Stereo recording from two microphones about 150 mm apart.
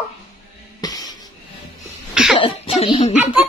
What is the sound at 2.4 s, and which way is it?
Speech, 35° left (ahead or behind).